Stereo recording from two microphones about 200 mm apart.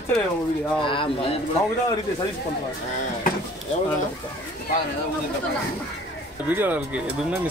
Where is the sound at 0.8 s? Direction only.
25° left (ahead or behind).